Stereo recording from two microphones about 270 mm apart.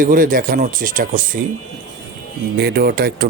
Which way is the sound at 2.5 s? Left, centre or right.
Right.